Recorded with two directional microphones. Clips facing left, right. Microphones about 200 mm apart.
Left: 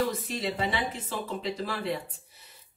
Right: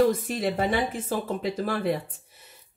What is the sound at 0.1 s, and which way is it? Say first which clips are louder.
Speech: right 5 dB; 50° right (ahead or behind).